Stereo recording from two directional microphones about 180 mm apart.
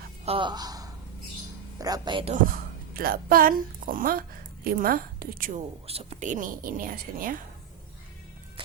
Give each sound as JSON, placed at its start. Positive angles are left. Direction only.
{"t": 0.3, "sound": "speech", "side_deg": -25}
{"t": 2.9, "sound": "a woman's voice", "side_deg": -55}
{"t": 5.5, "sound": "a woman's voice", "side_deg": -35}